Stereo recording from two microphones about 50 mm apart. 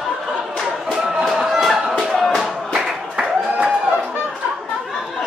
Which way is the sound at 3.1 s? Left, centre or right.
Centre.